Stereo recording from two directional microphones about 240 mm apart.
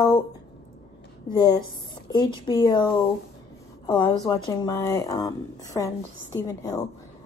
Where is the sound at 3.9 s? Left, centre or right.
Centre.